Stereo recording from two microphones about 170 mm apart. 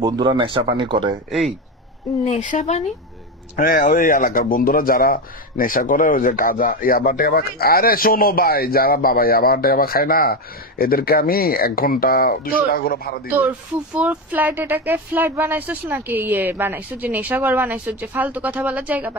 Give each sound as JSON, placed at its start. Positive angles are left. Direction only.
{"t": 0.0, "sound": "speech", "side_deg": -25}
{"t": 2.2, "sound": "speech", "side_deg": 45}
{"t": 13.9, "sound": "speech", "side_deg": -10}